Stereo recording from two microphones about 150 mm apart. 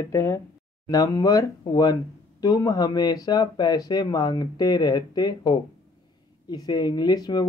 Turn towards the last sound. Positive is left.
turn(degrees=25)  # may be behind; listen again after turning